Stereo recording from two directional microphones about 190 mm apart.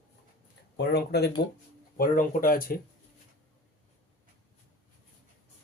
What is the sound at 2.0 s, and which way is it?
Speech, 45° left (ahead or behind).